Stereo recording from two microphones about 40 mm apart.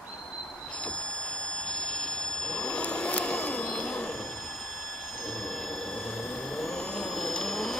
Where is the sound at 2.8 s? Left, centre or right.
Left.